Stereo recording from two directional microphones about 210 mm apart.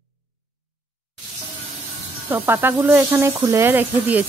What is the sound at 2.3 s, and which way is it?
Speech, 10° right (ahead or behind).